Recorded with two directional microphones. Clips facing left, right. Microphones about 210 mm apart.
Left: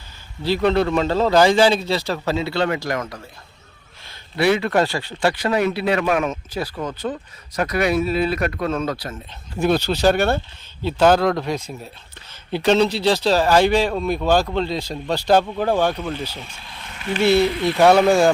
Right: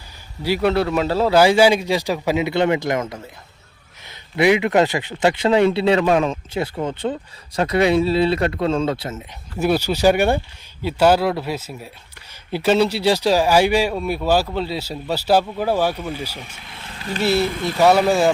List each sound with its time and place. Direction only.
0.4 s speech: 10° right (ahead or behind); by 9.2 s 25° right (ahead or behind)
9.6 s speech: 10° right (ahead or behind)
17.0 s speech: 35° right (ahead or behind)
17.4 s speech: 45° right (ahead or behind)
17.7 s speech: 5° right (ahead or behind)